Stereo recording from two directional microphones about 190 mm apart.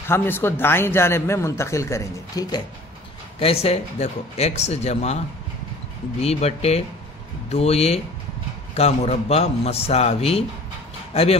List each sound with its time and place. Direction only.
0.1 s a man's voice: 10° left (ahead or behind)
3.3 s speech: 30° left (ahead or behind)
6.2 s speech: 35° left (ahead or behind)